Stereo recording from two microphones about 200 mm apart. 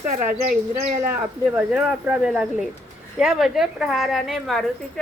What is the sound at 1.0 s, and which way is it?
A woman's voice, 10° right (ahead or behind).